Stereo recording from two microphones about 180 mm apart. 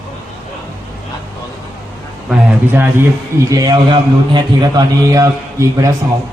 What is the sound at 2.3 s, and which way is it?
A man's voice, 10° right (ahead or behind).